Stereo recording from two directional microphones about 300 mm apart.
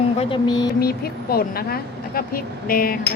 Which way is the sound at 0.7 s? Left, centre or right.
Left.